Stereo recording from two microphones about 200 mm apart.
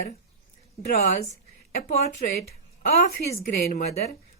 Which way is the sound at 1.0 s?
35° left (ahead or behind).